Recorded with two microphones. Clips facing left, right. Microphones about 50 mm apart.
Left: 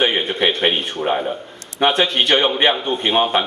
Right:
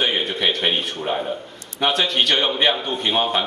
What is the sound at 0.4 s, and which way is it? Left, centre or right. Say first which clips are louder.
A man's voice: left 4 dB; left.